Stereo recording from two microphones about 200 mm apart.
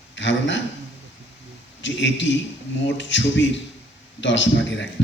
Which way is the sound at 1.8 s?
65° left (ahead or behind).